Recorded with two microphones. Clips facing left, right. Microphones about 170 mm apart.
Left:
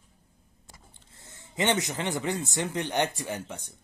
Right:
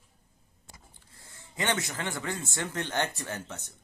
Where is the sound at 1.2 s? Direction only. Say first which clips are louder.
Left 5 dB; 20° left (ahead or behind).